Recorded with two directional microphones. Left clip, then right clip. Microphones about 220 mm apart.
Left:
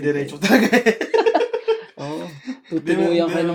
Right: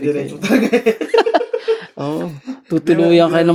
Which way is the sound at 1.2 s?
55° right (ahead or behind).